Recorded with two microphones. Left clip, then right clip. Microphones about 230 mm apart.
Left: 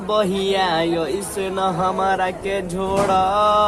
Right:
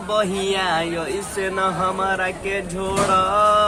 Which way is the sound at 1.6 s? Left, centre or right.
Centre.